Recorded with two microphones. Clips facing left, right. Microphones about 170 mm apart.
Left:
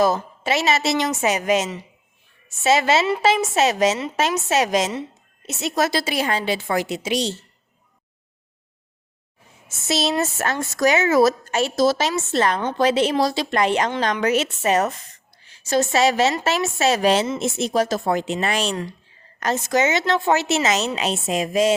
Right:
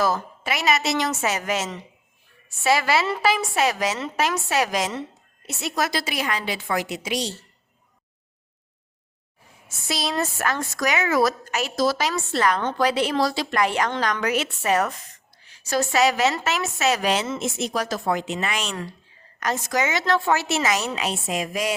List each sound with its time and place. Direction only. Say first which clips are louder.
0.0 s speech: left 4 dB; 25° left (ahead or behind)
9.6 s a woman's voice: left 5 dB; 25° left (ahead or behind)